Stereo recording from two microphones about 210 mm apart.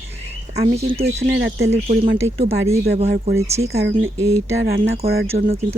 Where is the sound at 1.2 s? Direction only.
55° right (ahead or behind).